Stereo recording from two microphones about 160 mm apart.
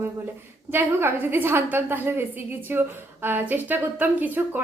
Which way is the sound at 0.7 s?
15° right (ahead or behind).